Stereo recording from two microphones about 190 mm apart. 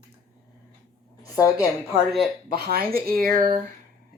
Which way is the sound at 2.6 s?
55° right (ahead or behind).